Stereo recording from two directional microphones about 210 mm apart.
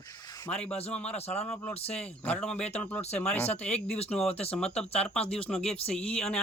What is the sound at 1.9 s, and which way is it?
A man's voice, 5° left (ahead or behind).